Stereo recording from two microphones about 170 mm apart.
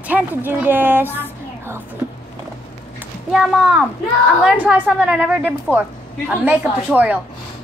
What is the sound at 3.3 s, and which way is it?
A woman's voice, centre (ahead or behind).